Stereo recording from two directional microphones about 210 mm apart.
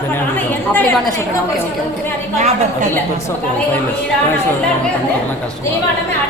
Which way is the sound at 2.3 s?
35° right (ahead or behind).